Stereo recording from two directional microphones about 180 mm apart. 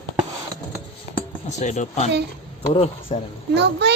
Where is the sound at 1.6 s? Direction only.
40° left (ahead or behind).